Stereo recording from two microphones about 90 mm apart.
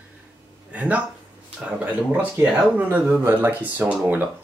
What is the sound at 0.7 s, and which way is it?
Speech, 15° right (ahead or behind).